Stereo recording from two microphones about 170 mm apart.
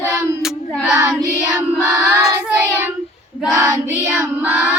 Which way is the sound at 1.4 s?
20° right (ahead or behind).